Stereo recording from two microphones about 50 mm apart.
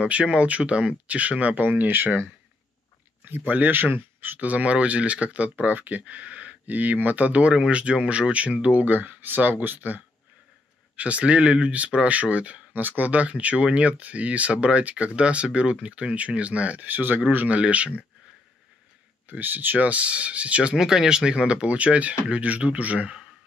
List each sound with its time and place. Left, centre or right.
0.0 s speech: right
3.3 s speech: right
17.6 s speech: right
19.2 s speech: right
20.7 s speech: centre; by 23.1 s right